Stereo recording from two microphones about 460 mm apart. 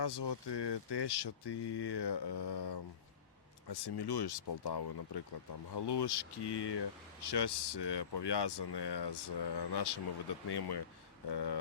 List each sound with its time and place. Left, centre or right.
0.0 s speech: left